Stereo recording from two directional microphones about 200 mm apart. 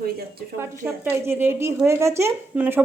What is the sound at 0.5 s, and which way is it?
A woman's voice, 15° right (ahead or behind).